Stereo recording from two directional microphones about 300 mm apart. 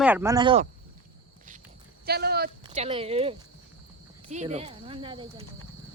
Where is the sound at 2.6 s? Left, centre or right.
Centre.